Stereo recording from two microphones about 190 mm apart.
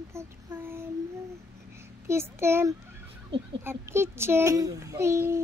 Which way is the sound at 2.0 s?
15° right (ahead or behind).